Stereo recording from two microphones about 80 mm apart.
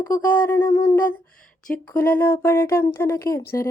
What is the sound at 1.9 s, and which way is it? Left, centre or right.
Speech, left.